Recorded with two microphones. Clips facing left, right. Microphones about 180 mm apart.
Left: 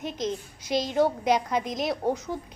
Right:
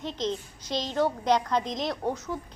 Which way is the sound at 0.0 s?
10° left (ahead or behind).